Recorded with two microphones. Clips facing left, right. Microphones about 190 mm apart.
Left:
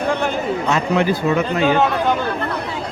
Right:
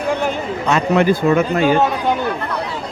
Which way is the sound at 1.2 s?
50° right (ahead or behind).